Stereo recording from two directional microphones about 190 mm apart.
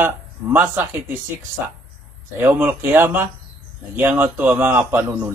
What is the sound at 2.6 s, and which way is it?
A man's voice, 10° right (ahead or behind).